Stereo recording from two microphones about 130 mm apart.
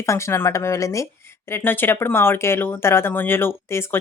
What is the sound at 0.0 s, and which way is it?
Speech, 20° left (ahead or behind).